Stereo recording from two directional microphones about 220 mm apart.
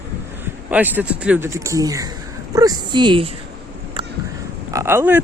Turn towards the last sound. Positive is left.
turn(degrees=-10)  # may be behind; listen again after turning